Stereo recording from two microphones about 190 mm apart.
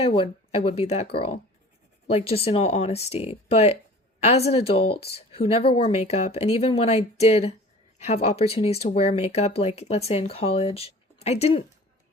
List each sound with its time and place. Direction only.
0.0 s speech: 30° left (ahead or behind)